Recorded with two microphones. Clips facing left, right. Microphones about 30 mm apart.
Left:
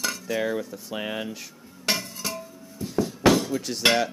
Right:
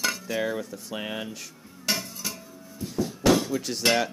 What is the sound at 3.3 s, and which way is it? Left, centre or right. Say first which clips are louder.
Hammer: even; centre.